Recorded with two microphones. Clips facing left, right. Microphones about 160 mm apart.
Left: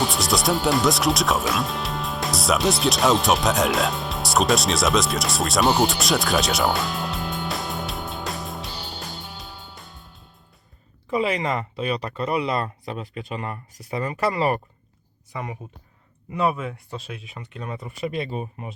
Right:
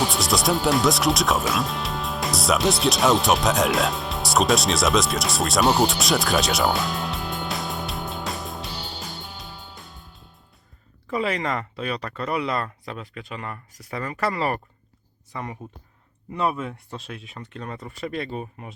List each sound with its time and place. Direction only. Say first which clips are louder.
0.0 s music: even; centre (ahead or behind)
11.1 s speech: left 2 dB; 15° left (ahead or behind)